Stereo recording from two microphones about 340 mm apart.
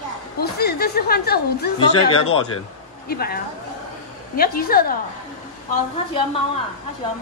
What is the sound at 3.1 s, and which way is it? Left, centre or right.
Speech, left.